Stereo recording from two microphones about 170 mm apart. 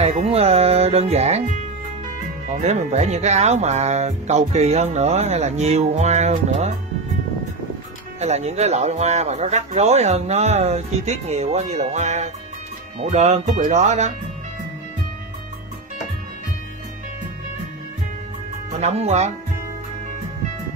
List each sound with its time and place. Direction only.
0.0 s speech: 35° right (ahead or behind)
8.2 s speech: 40° right (ahead or behind)
18.7 s speech: 40° right (ahead or behind)